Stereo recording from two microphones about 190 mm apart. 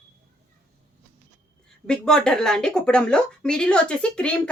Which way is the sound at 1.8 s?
5° left (ahead or behind).